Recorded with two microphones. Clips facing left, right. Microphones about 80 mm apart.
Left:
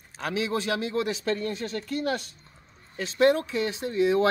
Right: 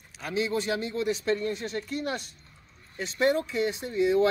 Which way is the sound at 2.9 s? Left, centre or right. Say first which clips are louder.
Left 3 dB; left.